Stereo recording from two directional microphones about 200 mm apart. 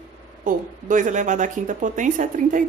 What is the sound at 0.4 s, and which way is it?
Speech, 40° right (ahead or behind).